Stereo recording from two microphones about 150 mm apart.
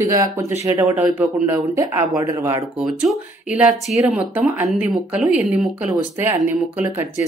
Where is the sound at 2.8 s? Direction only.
5° right (ahead or behind).